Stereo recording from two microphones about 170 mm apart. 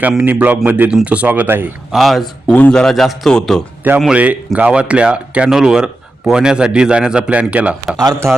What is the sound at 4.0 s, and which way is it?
Speech, 5° right (ahead or behind).